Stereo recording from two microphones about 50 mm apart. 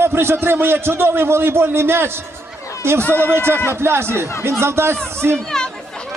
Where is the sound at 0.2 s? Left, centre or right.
Right.